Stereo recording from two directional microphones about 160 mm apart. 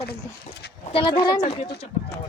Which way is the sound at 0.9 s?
35° left (ahead or behind).